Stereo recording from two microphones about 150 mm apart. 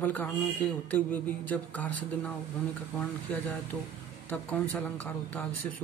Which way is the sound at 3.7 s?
10° left (ahead or behind).